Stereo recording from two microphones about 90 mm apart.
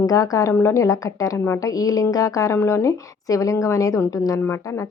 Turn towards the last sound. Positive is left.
turn(degrees=40)  # may be behind; listen again after turning